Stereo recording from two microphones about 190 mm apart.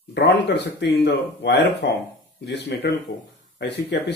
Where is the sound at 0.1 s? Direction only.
65° left (ahead or behind).